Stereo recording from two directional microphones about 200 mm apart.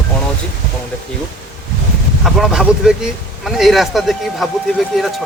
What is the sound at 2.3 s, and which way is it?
Speech, centre (ahead or behind).